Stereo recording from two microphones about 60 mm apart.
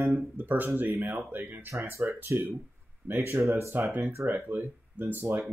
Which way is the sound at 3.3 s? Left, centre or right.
Right.